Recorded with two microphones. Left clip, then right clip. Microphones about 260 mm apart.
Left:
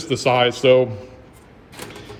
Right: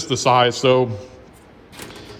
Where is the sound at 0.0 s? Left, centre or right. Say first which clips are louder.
Right 2 dB; centre.